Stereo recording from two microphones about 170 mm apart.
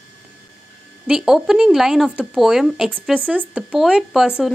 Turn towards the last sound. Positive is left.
turn(degrees=-5)  # may be behind; listen again after turning